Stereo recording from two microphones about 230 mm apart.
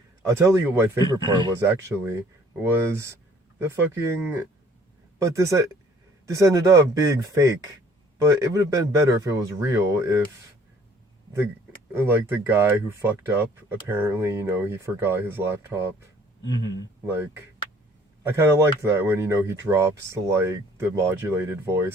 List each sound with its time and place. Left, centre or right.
0.3 s speech: centre
11.9 s speech: centre
16.4 s a sound: centre
18.2 s speech: centre